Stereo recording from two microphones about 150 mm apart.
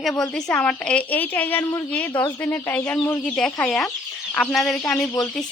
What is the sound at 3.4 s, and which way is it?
Speech, 5° left (ahead or behind).